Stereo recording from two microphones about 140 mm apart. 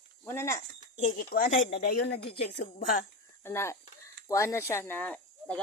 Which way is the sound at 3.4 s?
20° left (ahead or behind).